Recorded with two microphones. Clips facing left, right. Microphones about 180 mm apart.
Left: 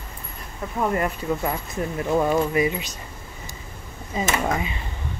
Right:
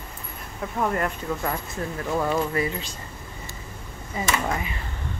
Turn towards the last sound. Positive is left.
turn(degrees=20)  # may be behind; listen again after turning